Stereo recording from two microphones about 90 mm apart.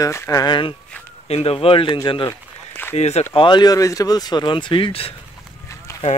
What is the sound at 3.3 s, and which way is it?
Speech, 55° left (ahead or behind).